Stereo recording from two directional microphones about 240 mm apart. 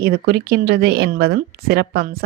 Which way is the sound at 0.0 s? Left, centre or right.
Right.